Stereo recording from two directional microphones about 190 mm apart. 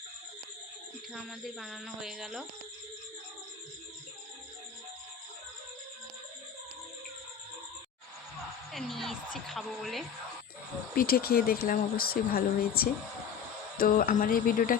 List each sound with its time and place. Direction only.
1.1 s speech: centre (ahead or behind)
8.7 s a woman's voice: centre (ahead or behind)
10.9 s speech: 50° left (ahead or behind)